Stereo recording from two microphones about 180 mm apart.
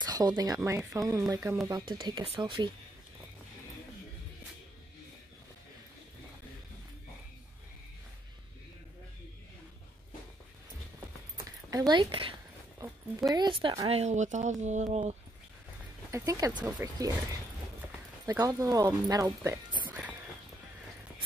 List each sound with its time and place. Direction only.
0.0 s speech: 20° right (ahead or behind)
11.7 s a woman's voice: 25° right (ahead or behind)
16.1 s speech: 20° right (ahead or behind)
18.2 s speech: 20° right (ahead or behind)
19.9 s music: 10° right (ahead or behind)